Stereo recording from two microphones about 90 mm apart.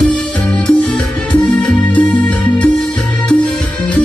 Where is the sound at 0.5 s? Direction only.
10° left (ahead or behind).